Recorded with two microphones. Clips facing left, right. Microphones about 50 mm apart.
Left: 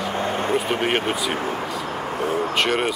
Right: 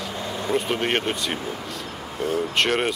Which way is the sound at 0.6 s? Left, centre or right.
Centre.